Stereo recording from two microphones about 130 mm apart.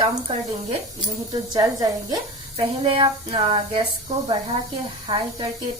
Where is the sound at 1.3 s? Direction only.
30° right (ahead or behind).